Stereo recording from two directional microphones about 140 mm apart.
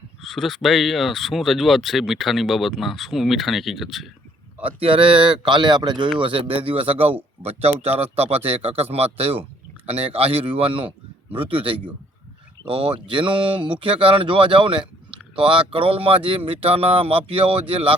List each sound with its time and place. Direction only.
0.2 s speech: 5° left (ahead or behind)
4.6 s speech: 40° right (ahead or behind)
13.1 s speech: 35° right (ahead or behind)